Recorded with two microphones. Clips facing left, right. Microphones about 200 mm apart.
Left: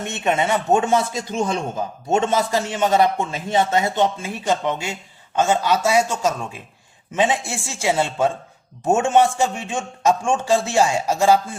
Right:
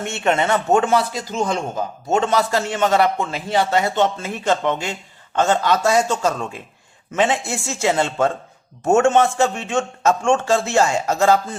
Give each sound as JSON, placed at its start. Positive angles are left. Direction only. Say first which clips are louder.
{"t": 0.0, "sound": "a man's voice", "louder": "right 1 dB", "side_deg": 15}
{"t": 2.1, "sound": "a man's voice", "louder": "right 1 dB", "side_deg": 20}